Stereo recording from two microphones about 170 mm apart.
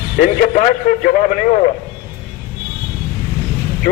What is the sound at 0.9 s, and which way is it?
Speech, 50° left (ahead or behind).